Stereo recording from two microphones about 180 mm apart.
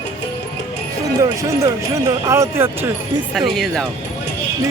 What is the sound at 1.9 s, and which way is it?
Speech, 15° right (ahead or behind).